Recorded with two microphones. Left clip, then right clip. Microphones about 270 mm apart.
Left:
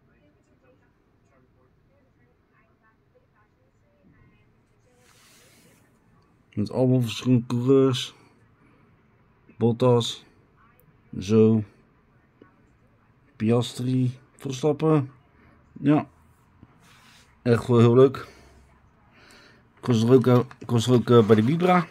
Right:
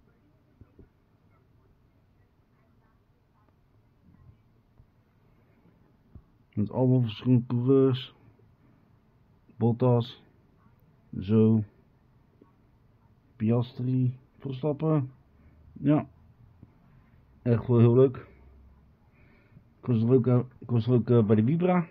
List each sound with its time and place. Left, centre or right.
6.5 s speech: centre
9.6 s speech: centre
13.4 s speech: centre
17.4 s speech: centre